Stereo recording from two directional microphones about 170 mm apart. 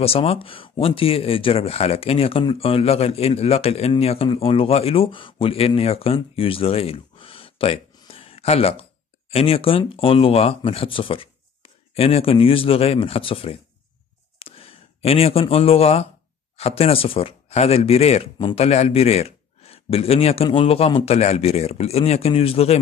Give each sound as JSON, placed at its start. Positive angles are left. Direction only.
{"t": 0.0, "sound": "a man's voice", "side_deg": 35}